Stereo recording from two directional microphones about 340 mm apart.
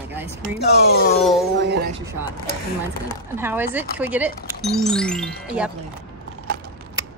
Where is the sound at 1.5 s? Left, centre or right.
Right.